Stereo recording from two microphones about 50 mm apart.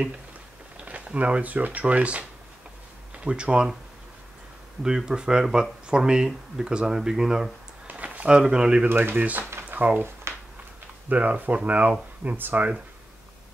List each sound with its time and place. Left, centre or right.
0.8 s speech: right
3.3 s speech: centre
4.8 s speech: centre
7.8 s a sound: right
8.3 s speech: centre
8.8 s speech: right
10.3 s a sound: right
11.1 s speech: right